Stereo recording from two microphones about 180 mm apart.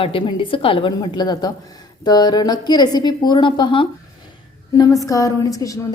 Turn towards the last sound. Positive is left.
turn(degrees=20)  # may be behind; listen again after turning